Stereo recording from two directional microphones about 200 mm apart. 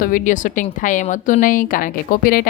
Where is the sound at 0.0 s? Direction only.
40° left (ahead or behind).